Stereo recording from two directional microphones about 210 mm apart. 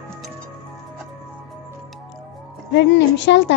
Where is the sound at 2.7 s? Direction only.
55° left (ahead or behind).